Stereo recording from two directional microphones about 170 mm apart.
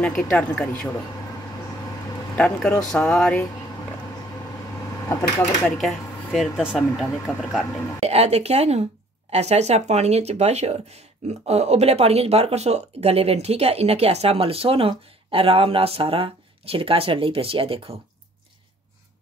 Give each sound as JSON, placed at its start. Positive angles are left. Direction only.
{"t": 0.0, "sound": "speech", "side_deg": 5}
{"t": 2.3, "sound": "speech", "side_deg": 5}
{"t": 5.4, "sound": "speech", "side_deg": 0}
{"t": 8.0, "sound": "speech", "side_deg": -40}